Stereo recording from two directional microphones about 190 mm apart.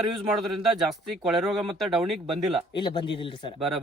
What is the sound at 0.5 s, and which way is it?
Speech, centre (ahead or behind).